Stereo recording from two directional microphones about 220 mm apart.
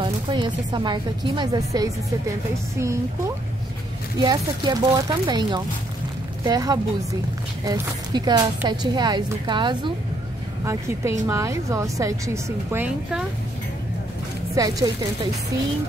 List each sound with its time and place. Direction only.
0.0 s a woman's voice: 20° right (ahead or behind)
14.5 s speech: 15° right (ahead or behind)